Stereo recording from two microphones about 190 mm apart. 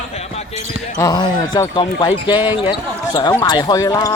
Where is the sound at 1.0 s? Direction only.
20° left (ahead or behind).